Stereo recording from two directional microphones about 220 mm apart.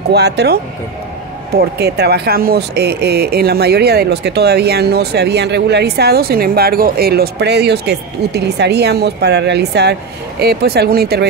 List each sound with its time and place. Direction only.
0.1 s speech: 50° right (ahead or behind)
1.6 s speech: 45° right (ahead or behind)